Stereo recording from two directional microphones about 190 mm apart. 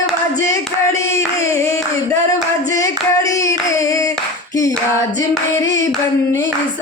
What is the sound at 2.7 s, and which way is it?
Hands, 15° left (ahead or behind).